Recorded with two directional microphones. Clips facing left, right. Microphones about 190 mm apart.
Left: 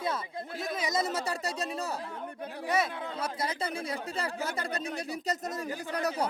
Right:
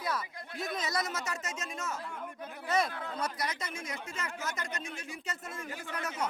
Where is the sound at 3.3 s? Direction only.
30° left (ahead or behind).